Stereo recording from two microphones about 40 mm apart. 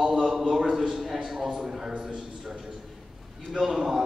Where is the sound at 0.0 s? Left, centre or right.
Centre.